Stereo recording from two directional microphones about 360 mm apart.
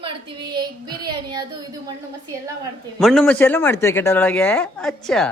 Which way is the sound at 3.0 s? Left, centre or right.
Centre.